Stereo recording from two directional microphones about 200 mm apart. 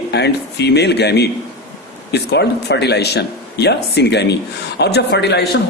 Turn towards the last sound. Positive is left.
turn(degrees=55)  # may be behind; listen again after turning